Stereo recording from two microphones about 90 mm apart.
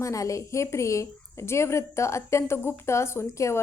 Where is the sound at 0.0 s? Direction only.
35° left (ahead or behind).